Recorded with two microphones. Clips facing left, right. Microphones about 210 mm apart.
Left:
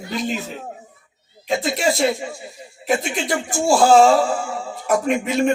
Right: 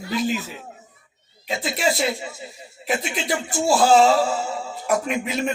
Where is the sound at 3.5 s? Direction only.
45° left (ahead or behind).